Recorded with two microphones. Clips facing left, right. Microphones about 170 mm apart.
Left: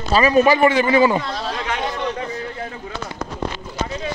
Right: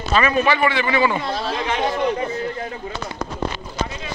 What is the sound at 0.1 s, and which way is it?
A man's voice, 35° left (ahead or behind).